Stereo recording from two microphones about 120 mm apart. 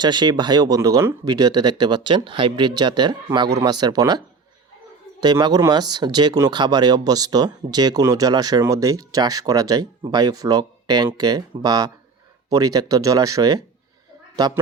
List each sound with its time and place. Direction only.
0.0 s speech: 40° right (ahead or behind)
5.2 s speech: 35° right (ahead or behind)